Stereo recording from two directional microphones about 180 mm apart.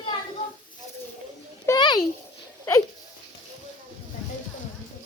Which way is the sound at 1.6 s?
20° left (ahead or behind).